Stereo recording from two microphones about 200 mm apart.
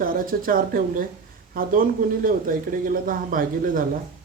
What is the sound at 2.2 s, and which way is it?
Speech, 45° right (ahead or behind).